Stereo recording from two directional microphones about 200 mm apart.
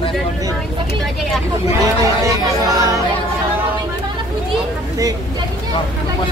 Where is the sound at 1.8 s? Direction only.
15° right (ahead or behind).